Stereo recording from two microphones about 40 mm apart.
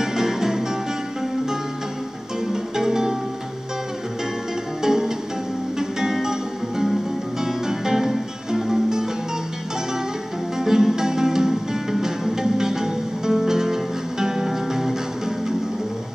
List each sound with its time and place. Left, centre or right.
0.0 s music: centre
2.4 s music: centre
4.8 s music: centre
10.6 s music: centre